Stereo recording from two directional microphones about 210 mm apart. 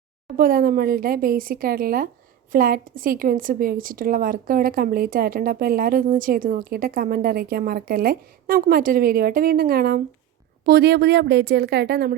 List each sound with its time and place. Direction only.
0.3 s a woman's voice: 45° right (ahead or behind)